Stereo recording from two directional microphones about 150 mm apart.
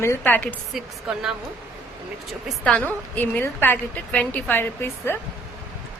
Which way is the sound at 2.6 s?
10° left (ahead or behind).